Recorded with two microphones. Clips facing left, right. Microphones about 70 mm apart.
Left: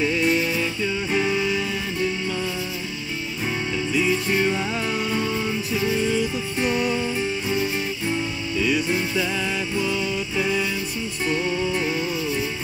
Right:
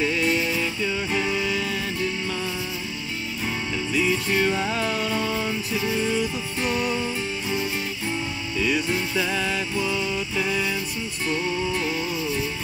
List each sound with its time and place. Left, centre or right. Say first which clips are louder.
0.0 s music: left 2 dB; centre
3.9 s music: left 1 dB; centre
8.5 s music: left 2 dB; centre
11.2 s music: left 2 dB; centre